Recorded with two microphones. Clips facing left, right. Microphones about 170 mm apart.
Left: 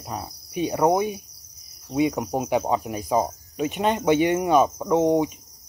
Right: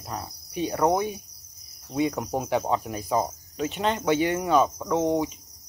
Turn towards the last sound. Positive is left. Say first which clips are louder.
# left 4 dB
turn(degrees=15)  # may be behind; listen again after turning